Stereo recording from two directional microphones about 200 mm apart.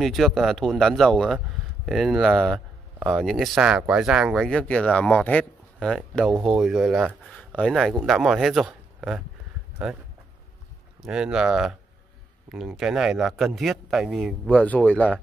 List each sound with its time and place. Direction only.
0.0 s speech: centre (ahead or behind)
11.0 s speech: 5° right (ahead or behind)